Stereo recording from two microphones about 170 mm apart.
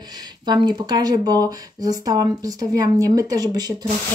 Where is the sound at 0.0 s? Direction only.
25° right (ahead or behind).